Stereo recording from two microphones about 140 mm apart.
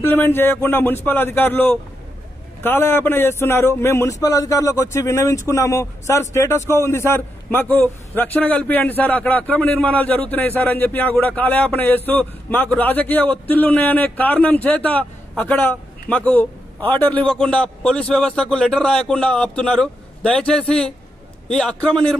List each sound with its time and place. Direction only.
0.0 s a man's voice: 15° left (ahead or behind)